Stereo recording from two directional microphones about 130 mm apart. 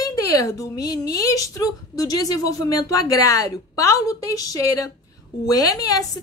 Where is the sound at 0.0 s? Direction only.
25° left (ahead or behind).